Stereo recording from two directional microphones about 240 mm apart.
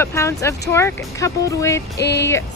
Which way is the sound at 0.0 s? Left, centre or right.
Centre.